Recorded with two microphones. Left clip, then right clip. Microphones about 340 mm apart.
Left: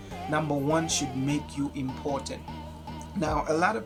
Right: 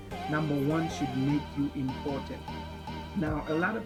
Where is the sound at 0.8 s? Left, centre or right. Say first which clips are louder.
Left 3 dB; centre.